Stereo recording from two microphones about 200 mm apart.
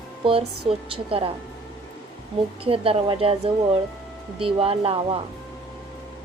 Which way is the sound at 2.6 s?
30° right (ahead or behind).